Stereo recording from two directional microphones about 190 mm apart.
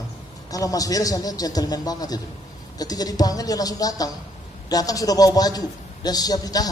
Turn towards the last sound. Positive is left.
turn(degrees=20)  # may be behind; listen again after turning